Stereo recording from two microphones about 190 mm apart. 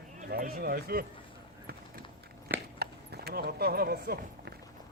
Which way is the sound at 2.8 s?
55° right (ahead or behind).